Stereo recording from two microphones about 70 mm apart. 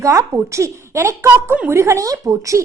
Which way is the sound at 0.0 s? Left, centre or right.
Right.